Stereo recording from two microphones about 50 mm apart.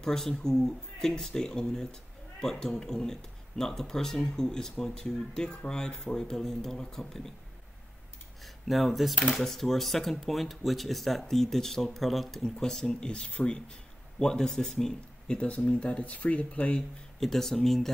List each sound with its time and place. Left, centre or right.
0.0 s speech: centre
8.6 s speech: centre
12.4 s speech: centre
15.3 s speech: left
17.2 s speech: centre